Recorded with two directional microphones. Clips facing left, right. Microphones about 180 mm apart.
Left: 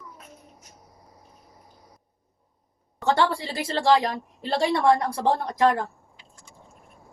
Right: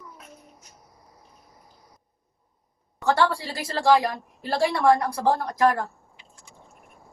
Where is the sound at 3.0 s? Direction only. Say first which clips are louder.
Even; 25° left (ahead or behind).